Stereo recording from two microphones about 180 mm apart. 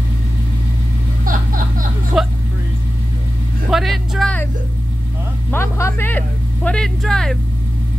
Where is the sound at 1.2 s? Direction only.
50° right (ahead or behind).